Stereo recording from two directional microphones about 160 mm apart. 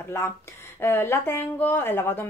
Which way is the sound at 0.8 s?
15° left (ahead or behind).